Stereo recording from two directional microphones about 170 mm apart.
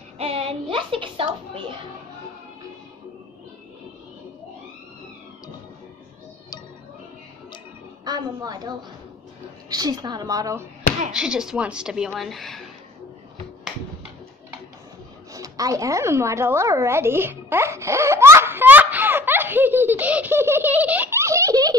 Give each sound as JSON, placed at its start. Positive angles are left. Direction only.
{"t": 0.2, "sound": "a child's voice", "side_deg": -35}
{"t": 8.0, "sound": "a woman's voice", "side_deg": -25}
{"t": 11.1, "sound": "a woman's voice", "side_deg": -5}
{"t": 15.3, "sound": "a sound", "side_deg": -20}